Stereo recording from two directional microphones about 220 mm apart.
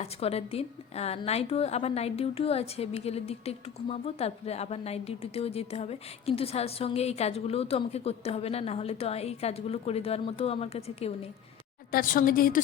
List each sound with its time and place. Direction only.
0.0 s a woman's voice: 30° left (ahead or behind)
11.9 s a woman's voice: 40° left (ahead or behind)